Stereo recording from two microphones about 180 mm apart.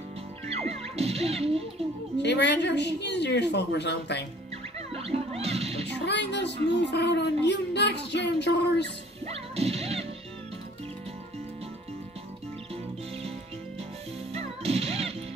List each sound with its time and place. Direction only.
0.5 s music: 35° right (ahead or behind)
2.1 s speech: 70° left (ahead or behind)
4.7 s music: 35° right (ahead or behind)
5.9 s speech: 70° left (ahead or behind)
9.2 s music: 35° right (ahead or behind)
14.3 s music: 35° right (ahead or behind)